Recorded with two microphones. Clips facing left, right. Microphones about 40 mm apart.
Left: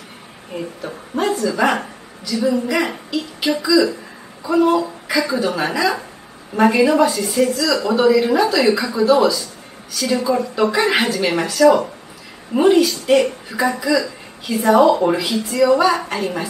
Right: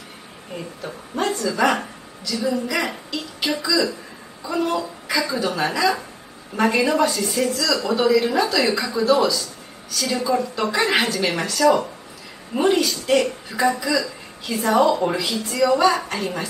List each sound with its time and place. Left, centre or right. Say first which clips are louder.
0.6 s a woman's voice: left 5 dB; centre